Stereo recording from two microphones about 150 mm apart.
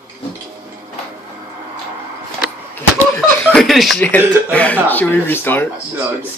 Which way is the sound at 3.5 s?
Centre (ahead or behind).